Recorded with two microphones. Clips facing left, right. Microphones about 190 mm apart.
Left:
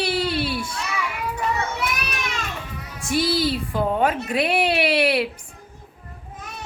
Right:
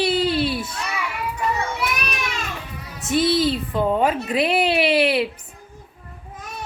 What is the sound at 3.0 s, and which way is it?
Speech, 25° right (ahead or behind).